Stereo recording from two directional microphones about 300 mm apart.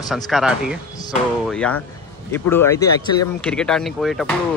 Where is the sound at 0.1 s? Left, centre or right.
Centre.